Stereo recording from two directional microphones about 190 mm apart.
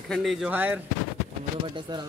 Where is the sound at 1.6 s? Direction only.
25° right (ahead or behind).